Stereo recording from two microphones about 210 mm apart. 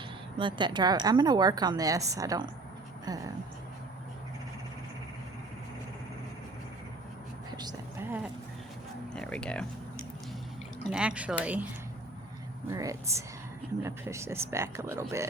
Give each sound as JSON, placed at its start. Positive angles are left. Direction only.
{"t": 0.3, "sound": "a woman's voice", "side_deg": -20}
{"t": 7.5, "sound": "a sound", "side_deg": -20}
{"t": 9.1, "sound": "speech", "side_deg": 5}
{"t": 10.9, "sound": "speech", "side_deg": -5}
{"t": 12.7, "sound": "speech", "side_deg": -15}